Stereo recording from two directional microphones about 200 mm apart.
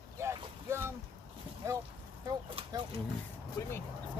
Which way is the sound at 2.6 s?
25° right (ahead or behind).